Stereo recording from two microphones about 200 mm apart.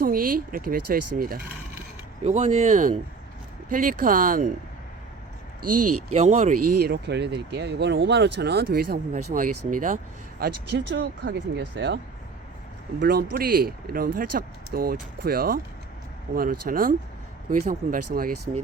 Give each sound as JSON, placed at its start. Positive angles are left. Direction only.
{"t": 0.0, "sound": "speech", "side_deg": -45}
{"t": 2.2, "sound": "speech", "side_deg": -35}
{"t": 6.1, "sound": "speech", "side_deg": -35}
{"t": 10.4, "sound": "speech", "side_deg": -60}
{"t": 13.0, "sound": "speech", "side_deg": -50}